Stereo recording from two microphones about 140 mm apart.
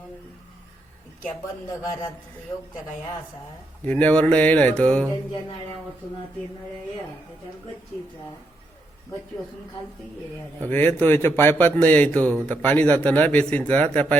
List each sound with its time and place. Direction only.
1.7 s a man's voice: 25° left (ahead or behind)
3.8 s a man's voice: 10° left (ahead or behind)
10.7 s a man's voice: 15° left (ahead or behind)